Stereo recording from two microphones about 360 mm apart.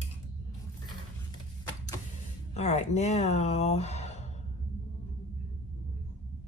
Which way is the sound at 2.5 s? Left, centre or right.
Centre.